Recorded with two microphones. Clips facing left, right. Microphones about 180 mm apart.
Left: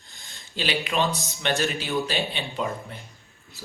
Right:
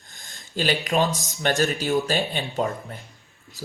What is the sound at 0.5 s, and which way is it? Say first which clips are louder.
Speech: right 4 dB; 45° right (ahead or behind).